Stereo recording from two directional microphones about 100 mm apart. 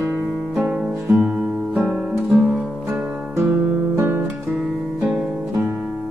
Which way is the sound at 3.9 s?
25° right (ahead or behind).